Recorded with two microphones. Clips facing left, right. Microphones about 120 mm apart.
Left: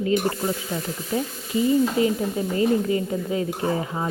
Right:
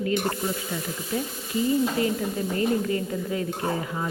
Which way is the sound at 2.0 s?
20° left (ahead or behind).